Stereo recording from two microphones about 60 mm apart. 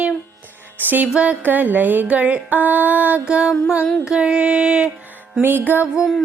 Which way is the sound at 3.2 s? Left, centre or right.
Centre.